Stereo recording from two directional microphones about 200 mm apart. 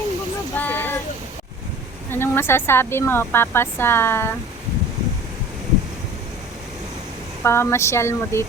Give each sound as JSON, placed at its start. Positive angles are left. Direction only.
{"t": 0.5, "sound": "a sound", "side_deg": 10}
{"t": 2.0, "sound": "speech", "side_deg": 10}
{"t": 7.4, "sound": "speech", "side_deg": 10}